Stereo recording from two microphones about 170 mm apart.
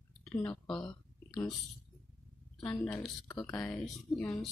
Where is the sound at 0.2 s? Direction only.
5° left (ahead or behind).